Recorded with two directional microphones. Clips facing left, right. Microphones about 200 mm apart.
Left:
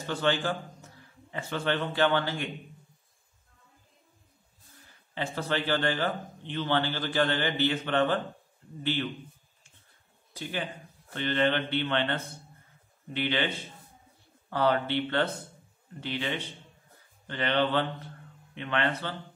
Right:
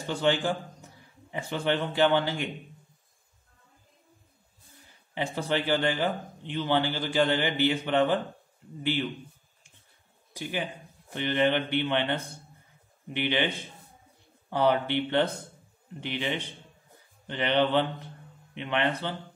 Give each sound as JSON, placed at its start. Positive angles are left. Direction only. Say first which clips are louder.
{"t": 0.0, "sound": "a man's voice", "louder": "right 2 dB", "side_deg": -15}
{"t": 5.1, "sound": "speech", "louder": "right 2 dB", "side_deg": -15}
{"t": 10.3, "sound": "speech", "louder": "right 2 dB", "side_deg": -15}
{"t": 14.5, "sound": "speech", "louder": "right 2 dB", "side_deg": -15}